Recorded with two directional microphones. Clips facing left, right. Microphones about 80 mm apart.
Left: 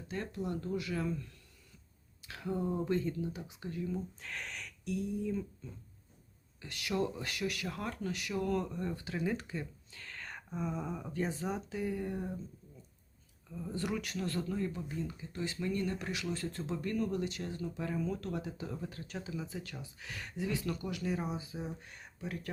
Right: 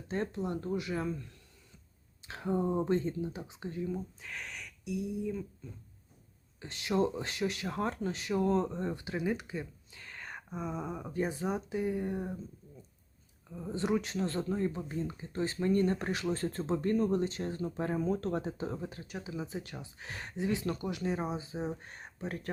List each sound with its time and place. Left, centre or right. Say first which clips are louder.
0.1 s speech: right 4 dB; right
2.2 s speech: right 4 dB; right
4.2 s speech: even; centre
6.6 s speech: right 4 dB; right
13.5 s speech: right 5 dB; right
19.0 s speech: right 1 dB; centre
19.3 s speech: right 5 dB; right